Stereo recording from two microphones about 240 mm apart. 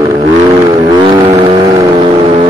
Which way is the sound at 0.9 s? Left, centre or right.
Right.